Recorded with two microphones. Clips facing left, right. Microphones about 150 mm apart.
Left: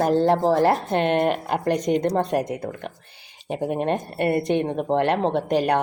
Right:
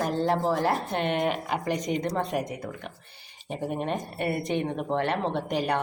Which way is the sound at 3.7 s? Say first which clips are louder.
Left 6 dB; 70° left (ahead or behind).